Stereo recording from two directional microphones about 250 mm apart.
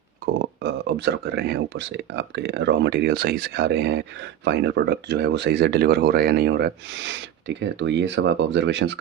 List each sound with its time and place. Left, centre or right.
0.3 s speech: right